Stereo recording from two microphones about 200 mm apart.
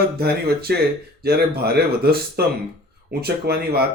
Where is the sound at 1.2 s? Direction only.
50° right (ahead or behind).